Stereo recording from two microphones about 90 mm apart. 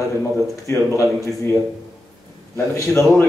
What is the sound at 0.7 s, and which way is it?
Speech, 30° left (ahead or behind).